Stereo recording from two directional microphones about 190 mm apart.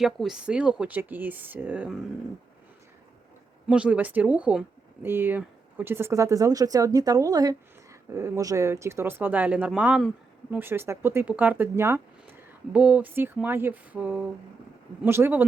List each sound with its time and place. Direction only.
0.0 s speech: centre (ahead or behind)
3.7 s speech: 5° right (ahead or behind)